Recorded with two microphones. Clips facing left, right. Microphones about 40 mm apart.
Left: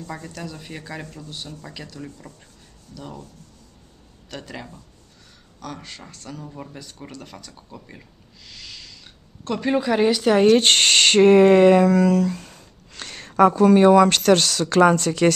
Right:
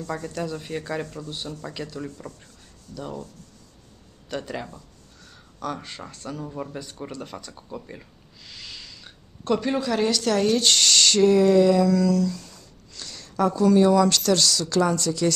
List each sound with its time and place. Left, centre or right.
0.3 s speech: centre
4.3 s speech: centre
8.5 s a sound: centre
9.6 s speech: centre
10.4 s speech: left